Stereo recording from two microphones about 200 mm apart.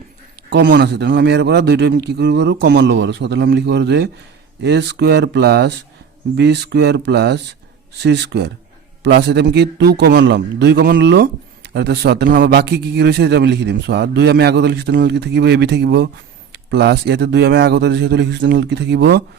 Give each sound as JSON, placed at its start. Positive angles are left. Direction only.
{"t": 0.5, "sound": "a man's voice", "side_deg": -60}